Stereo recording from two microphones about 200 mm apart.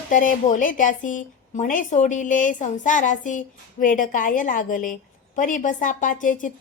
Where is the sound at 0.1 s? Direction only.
40° left (ahead or behind).